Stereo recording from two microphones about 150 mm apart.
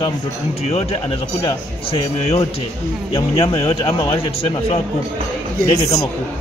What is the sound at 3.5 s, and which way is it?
Speech, 40° left (ahead or behind).